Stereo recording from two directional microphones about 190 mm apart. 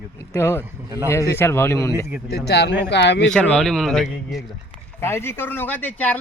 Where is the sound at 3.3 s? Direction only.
5° left (ahead or behind).